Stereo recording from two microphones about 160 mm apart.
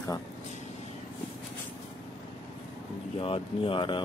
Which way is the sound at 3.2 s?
35° left (ahead or behind).